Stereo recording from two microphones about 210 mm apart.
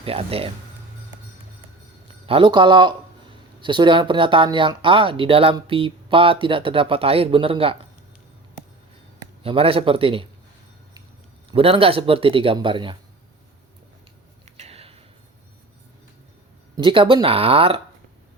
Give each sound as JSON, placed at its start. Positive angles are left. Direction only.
{"t": 0.0, "sound": "speech", "side_deg": -25}
{"t": 2.2, "sound": "speech", "side_deg": -25}
{"t": 9.1, "sound": "a man's voice", "side_deg": -25}
{"t": 11.5, "sound": "speech", "side_deg": -25}
{"t": 14.5, "sound": "a sound", "side_deg": -30}
{"t": 16.7, "sound": "speech", "side_deg": -25}